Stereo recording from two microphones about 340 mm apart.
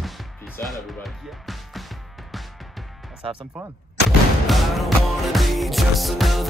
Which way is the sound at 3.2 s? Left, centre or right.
Centre.